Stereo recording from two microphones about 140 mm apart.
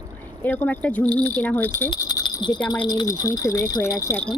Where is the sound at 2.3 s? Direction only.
30° left (ahead or behind).